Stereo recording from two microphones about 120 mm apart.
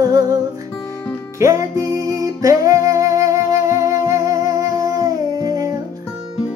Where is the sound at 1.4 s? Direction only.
25° right (ahead or behind).